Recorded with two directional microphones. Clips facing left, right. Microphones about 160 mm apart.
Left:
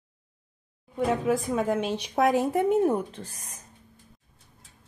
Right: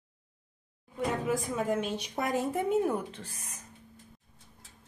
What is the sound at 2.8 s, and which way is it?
Speech, 40° left (ahead or behind).